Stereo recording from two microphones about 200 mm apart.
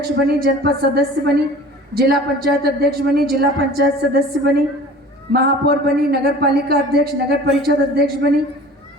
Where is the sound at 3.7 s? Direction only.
50° right (ahead or behind).